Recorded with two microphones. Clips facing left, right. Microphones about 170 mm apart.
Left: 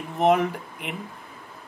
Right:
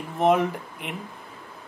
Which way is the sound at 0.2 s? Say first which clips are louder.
Even; centre (ahead or behind).